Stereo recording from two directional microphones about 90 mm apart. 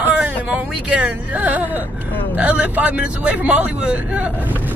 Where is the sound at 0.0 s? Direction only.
15° right (ahead or behind).